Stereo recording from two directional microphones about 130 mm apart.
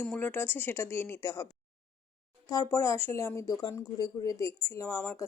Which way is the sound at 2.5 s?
25° left (ahead or behind).